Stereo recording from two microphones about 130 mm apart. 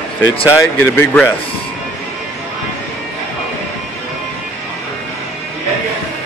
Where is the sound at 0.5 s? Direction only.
20° left (ahead or behind).